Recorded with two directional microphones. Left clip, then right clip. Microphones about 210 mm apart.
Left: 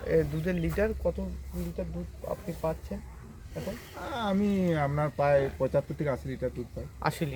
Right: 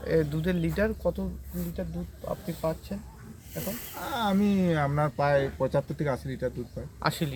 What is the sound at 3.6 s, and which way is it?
Speech, 50° right (ahead or behind).